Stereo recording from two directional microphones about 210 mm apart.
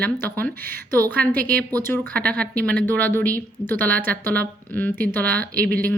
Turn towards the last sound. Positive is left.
turn(degrees=5)  # may be behind; listen again after turning